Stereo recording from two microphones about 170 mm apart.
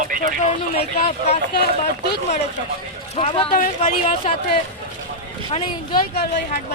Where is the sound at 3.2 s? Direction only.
35° left (ahead or behind).